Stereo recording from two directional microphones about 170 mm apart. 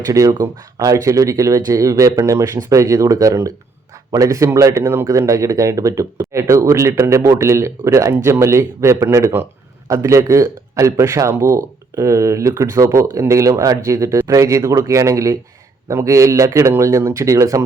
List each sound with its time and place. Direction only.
0.0 s a man's voice: 20° right (ahead or behind)